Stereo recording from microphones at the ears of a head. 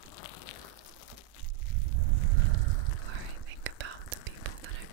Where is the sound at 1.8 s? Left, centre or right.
Right.